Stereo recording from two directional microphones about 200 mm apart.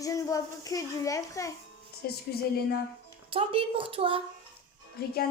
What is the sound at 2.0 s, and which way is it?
Speech, 50° left (ahead or behind).